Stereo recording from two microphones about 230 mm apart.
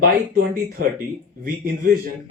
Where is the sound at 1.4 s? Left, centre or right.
Right.